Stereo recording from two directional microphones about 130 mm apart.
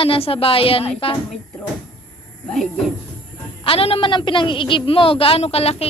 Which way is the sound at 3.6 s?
45° left (ahead or behind).